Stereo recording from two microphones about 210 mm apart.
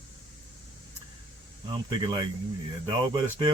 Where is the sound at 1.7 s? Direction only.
20° right (ahead or behind).